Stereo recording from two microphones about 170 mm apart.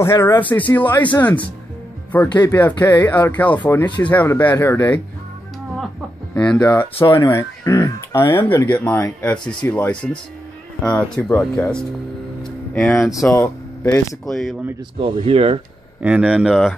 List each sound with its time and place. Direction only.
0.0 s speech: 15° left (ahead or behind)
2.2 s speech: 25° left (ahead or behind)
2.5 s speech: 10° left (ahead or behind)
6.3 s speech: 5° left (ahead or behind)
14.2 s speech: centre (ahead or behind)
15.0 s speech: 35° right (ahead or behind)
16.0 s speech: 5° right (ahead or behind)